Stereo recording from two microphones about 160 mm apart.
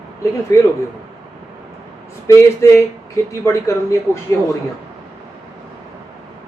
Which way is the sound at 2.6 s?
20° left (ahead or behind).